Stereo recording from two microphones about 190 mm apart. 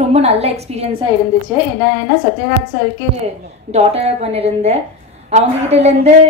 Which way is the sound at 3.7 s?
35° right (ahead or behind).